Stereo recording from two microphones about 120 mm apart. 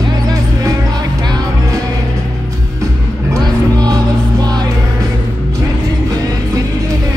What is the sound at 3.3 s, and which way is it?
Music, 30° right (ahead or behind).